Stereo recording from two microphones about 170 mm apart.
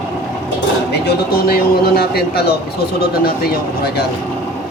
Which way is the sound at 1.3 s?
60° left (ahead or behind).